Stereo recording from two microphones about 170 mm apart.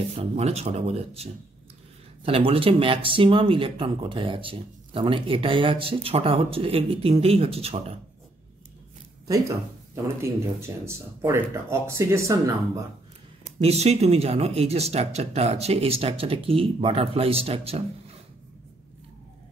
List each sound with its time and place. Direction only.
0.1 s speech: 35° right (ahead or behind)
10.0 s speech: 15° right (ahead or behind)
13.4 s speech: 40° right (ahead or behind)